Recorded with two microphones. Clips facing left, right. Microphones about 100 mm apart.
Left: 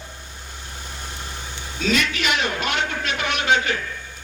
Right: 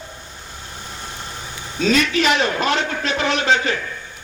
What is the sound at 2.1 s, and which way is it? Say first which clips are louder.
A man's voice: right 6 dB; 35° right (ahead or behind).